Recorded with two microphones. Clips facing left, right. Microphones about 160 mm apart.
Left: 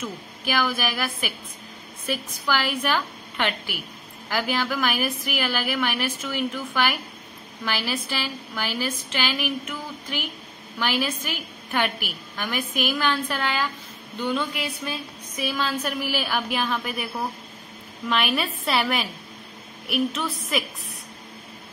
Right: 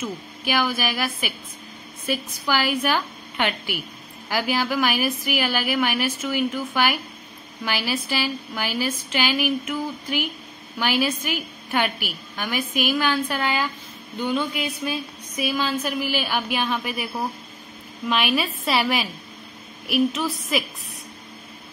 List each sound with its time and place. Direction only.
0.5 s a woman's voice: 5° right (ahead or behind)
20.2 s a woman's voice: 5° right (ahead or behind)